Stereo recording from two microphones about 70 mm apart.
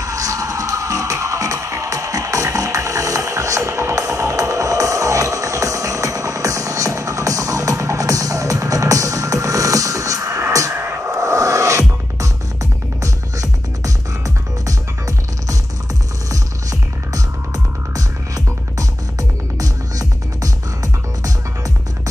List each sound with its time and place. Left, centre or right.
0.0 s music: right
17.9 s music: right